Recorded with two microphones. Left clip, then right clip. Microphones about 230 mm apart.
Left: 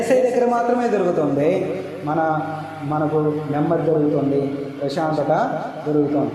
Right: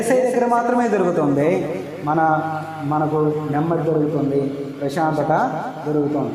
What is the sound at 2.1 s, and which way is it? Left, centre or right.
Mantra, right.